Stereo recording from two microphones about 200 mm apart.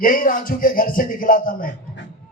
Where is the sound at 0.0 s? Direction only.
45° left (ahead or behind).